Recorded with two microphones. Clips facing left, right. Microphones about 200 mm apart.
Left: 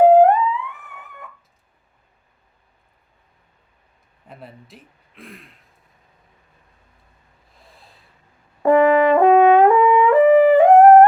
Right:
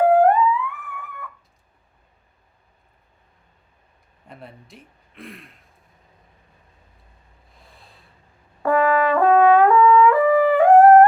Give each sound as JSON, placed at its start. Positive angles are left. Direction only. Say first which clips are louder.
{"t": 0.0, "sound": "theremin", "louder": "left 4 dB", "side_deg": 20}
{"t": 4.3, "sound": "speech", "louder": "left 1 dB", "side_deg": 0}
{"t": 7.5, "sound": "a sound", "louder": "left 1 dB", "side_deg": 0}
{"t": 8.6, "sound": "brass instrument", "louder": "left 5 dB", "side_deg": 20}